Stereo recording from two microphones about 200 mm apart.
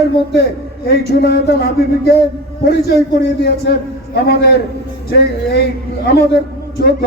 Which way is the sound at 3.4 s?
55° left (ahead or behind).